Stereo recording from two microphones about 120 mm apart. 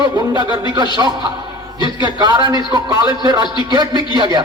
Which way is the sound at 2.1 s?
35° right (ahead or behind).